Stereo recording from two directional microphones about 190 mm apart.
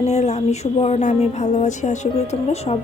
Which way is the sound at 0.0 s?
35° left (ahead or behind).